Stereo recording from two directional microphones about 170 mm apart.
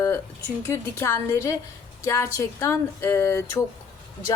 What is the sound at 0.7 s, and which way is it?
Speech, 15° left (ahead or behind).